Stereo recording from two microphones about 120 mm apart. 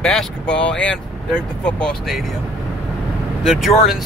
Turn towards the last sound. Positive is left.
turn(degrees=0)  # may be behind; listen again after turning